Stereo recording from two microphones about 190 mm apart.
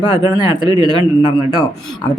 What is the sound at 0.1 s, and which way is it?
Speech, 25° right (ahead or behind).